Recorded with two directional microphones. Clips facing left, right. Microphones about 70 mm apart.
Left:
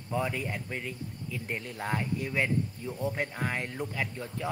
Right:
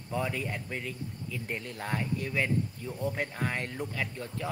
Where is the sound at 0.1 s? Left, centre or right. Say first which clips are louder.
Left 1 dB; centre.